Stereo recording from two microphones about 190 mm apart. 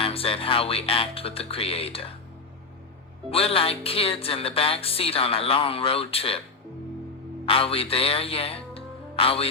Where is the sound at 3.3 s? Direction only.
30° left (ahead or behind).